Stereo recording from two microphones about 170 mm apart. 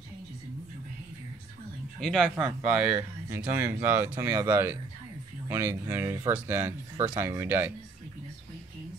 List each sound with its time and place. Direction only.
2.0 s speech: centre (ahead or behind)